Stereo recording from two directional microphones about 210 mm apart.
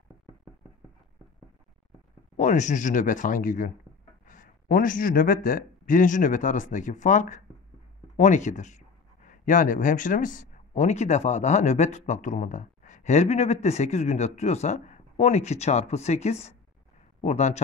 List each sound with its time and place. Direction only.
2.3 s speech: 35° left (ahead or behind)